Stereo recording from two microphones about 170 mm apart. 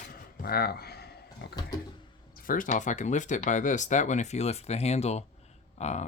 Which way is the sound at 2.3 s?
55° left (ahead or behind).